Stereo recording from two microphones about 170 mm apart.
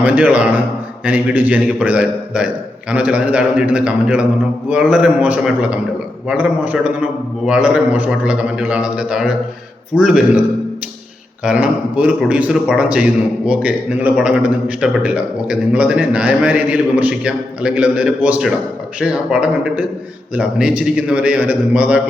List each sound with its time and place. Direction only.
0.0 s a man's voice: 5° right (ahead or behind)
11.4 s a man's voice: 5° right (ahead or behind)